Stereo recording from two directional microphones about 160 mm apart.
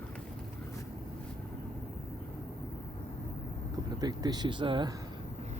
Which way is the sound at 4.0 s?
25° right (ahead or behind).